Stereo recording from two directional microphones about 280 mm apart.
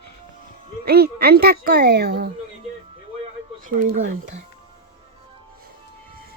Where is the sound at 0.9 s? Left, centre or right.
Right.